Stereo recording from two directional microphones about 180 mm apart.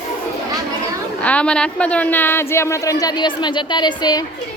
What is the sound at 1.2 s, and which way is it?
A woman's voice, 5° left (ahead or behind).